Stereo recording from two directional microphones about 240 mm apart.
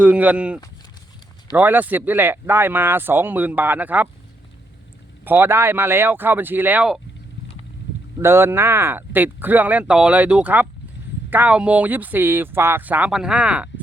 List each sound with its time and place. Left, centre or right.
0.0 s speech: centre
5.2 s speech: centre
8.2 s speech: centre